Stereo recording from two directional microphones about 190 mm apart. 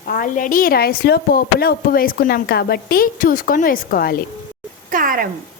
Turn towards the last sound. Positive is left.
turn(degrees=-45)  # may be behind; listen again after turning